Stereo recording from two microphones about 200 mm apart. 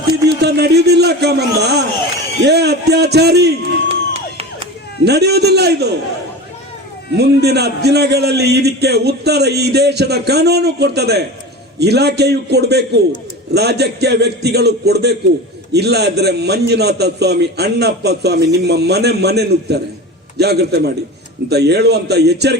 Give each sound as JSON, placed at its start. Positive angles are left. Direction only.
{"t": 0.3, "sound": "a man's voice", "side_deg": -55}
{"t": 3.8, "sound": "music", "side_deg": -30}
{"t": 5.0, "sound": "a man's voice", "side_deg": -55}
{"t": 7.2, "sound": "a man's voice", "side_deg": -55}